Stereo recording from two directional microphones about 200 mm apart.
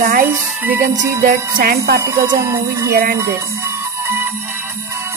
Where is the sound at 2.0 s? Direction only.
15° right (ahead or behind).